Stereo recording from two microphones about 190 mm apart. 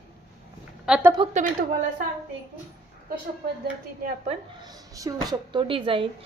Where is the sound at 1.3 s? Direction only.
40° right (ahead or behind).